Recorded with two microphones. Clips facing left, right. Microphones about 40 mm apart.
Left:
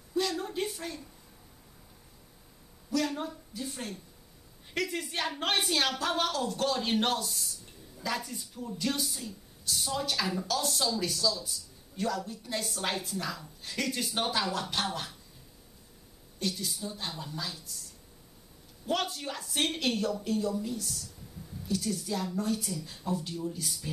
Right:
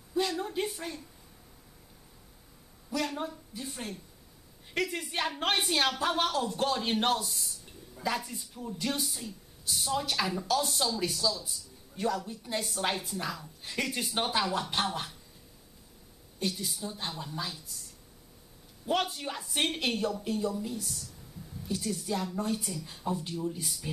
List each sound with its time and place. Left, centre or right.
0.1 s a sound: centre
3.1 s a woman's voice: centre
16.5 s speech: centre
18.9 s speech: centre
21.6 s speech: centre